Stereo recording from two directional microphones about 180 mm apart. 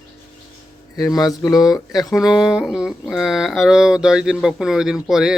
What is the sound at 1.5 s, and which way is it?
Speech, 20° left (ahead or behind).